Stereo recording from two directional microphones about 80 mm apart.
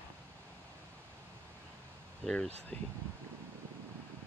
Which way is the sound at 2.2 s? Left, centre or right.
Centre.